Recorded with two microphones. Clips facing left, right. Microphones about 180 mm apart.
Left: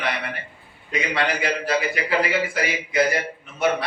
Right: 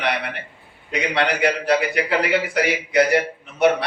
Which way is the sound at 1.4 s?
70° right (ahead or behind).